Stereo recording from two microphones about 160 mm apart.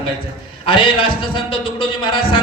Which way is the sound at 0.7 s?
30° left (ahead or behind).